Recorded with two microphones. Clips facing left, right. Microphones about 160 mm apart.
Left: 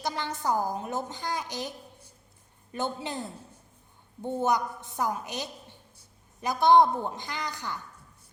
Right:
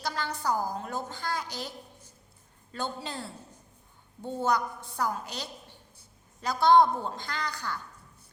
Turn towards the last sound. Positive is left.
turn(degrees=15)  # may be behind; listen again after turning